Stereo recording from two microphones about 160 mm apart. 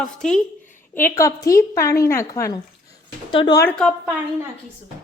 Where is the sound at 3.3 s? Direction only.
35° left (ahead or behind).